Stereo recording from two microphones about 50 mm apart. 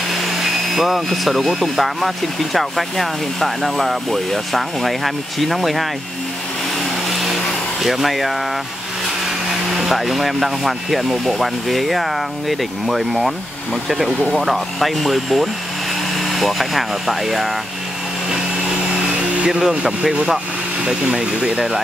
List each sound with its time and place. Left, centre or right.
0.1 s speech: centre
7.1 s vacuum cleaner: centre
7.8 s speech: centre
9.7 s speech: centre
19.4 s speech: centre